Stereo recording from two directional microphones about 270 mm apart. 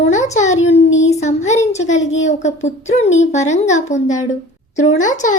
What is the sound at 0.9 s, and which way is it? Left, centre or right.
Speech, left.